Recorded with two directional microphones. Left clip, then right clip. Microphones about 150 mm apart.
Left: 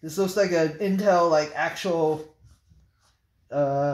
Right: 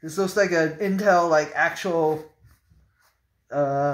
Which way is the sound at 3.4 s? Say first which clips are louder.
Right 1 dB; 25° left (ahead or behind).